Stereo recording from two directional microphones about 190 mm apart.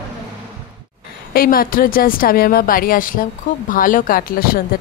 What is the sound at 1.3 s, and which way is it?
A woman's voice, 50° left (ahead or behind).